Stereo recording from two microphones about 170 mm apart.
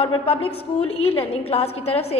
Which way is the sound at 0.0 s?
35° left (ahead or behind).